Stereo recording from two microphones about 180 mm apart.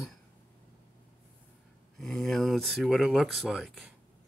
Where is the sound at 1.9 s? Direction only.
Centre (ahead or behind).